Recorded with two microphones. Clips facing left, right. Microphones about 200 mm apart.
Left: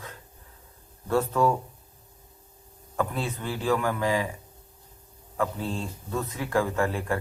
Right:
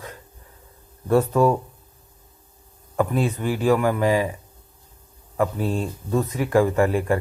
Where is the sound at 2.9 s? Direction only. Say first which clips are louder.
Right 7 dB; 15° right (ahead or behind).